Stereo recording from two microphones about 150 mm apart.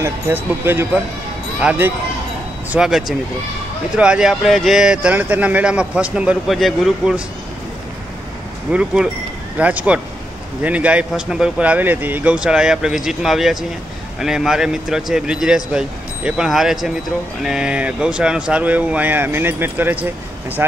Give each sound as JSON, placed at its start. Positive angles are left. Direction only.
{"t": 0.0, "sound": "speech", "side_deg": -15}
{"t": 8.7, "sound": "speech", "side_deg": -5}